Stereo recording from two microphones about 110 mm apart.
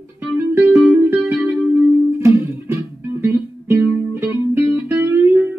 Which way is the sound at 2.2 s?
25° right (ahead or behind).